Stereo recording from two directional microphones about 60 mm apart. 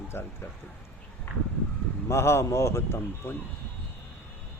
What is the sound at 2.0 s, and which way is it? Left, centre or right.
Speech, left.